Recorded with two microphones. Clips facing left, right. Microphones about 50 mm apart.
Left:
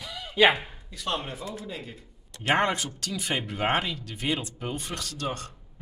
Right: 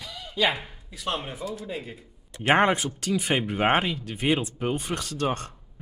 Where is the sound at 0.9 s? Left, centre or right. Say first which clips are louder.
Right 1 dB; centre; by 5.5 s right.